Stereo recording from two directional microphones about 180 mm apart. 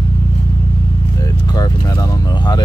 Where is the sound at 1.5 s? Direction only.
20° left (ahead or behind).